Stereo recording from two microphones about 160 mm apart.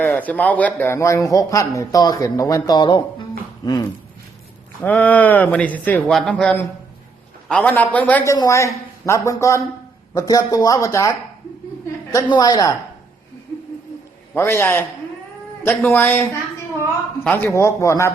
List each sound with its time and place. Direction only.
0.0 s speech: 10° left (ahead or behind); by 3.0 s 25° left (ahead or behind)
4.8 s speech: 10° left (ahead or behind)
14.3 s speech: 15° left (ahead or behind)
17.2 s speech: 15° left (ahead or behind)